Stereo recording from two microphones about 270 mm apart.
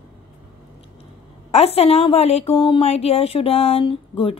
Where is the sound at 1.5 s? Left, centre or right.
Left.